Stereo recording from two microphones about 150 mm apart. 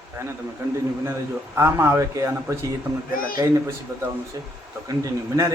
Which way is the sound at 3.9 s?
20° right (ahead or behind).